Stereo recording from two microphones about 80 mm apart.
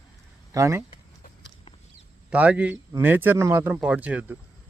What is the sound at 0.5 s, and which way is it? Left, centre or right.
Speech, right.